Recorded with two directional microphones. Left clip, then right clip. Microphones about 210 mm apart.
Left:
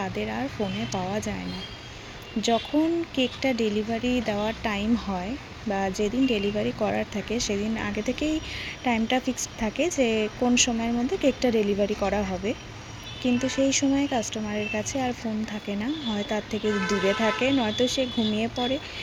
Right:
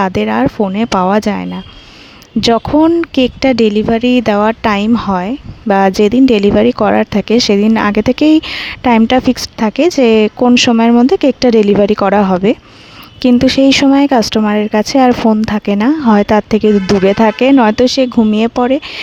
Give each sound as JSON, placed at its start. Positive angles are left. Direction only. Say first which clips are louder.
{"t": 0.0, "sound": "speech", "louder": "right 17 dB", "side_deg": -50}
{"t": 2.5, "sound": "speech", "louder": "right 14 dB", "side_deg": -50}